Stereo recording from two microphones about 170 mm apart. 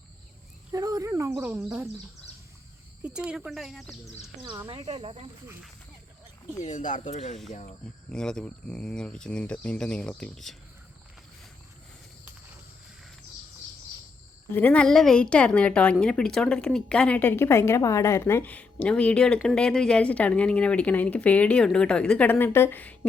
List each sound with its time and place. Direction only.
0.7 s speech: 20° right (ahead or behind)
3.0 s speech: 5° right (ahead or behind)
4.4 s speech: 20° right (ahead or behind)
4.9 s speech: 35° right (ahead or behind)
6.6 s speech: 45° left (ahead or behind)
8.1 s speech: 5° left (ahead or behind)
14.5 s a woman's voice: 10° left (ahead or behind)